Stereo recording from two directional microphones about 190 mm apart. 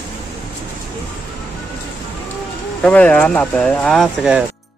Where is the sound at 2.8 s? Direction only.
5° left (ahead or behind).